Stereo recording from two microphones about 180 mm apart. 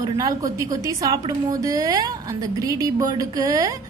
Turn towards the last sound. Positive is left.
turn(degrees=-20)  # may be behind; listen again after turning